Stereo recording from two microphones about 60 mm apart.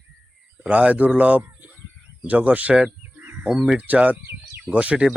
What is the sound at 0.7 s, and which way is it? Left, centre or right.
Speech, right.